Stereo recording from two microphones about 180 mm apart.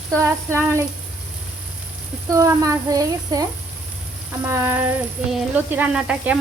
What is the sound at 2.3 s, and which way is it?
Speech, 20° right (ahead or behind).